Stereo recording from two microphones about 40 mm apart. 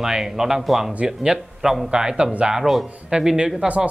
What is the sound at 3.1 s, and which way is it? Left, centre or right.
Speech, right.